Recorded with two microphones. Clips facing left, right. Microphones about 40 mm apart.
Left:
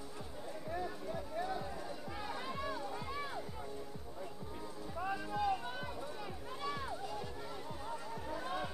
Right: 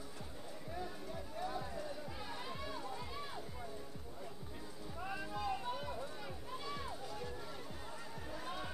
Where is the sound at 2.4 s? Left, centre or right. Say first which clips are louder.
Left 5 dB; centre.